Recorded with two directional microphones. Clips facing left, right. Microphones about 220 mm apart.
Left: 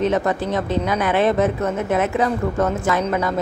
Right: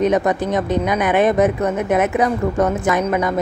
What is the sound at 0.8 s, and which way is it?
Speech, 15° right (ahead or behind).